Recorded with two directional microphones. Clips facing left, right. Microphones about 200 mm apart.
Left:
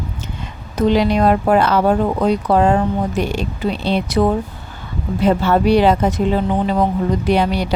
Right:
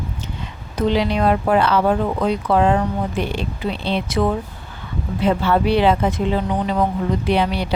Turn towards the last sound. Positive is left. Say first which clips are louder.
# left 3 dB
turn(degrees=45)  # may be behind; listen again after turning